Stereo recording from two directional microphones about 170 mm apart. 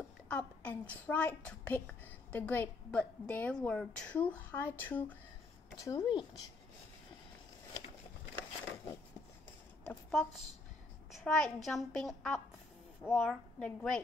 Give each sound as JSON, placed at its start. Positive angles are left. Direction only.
{"t": 0.3, "sound": "a woman's voice", "side_deg": 10}
{"t": 5.9, "sound": "speech", "side_deg": 25}
{"t": 9.8, "sound": "a child's voice", "side_deg": 0}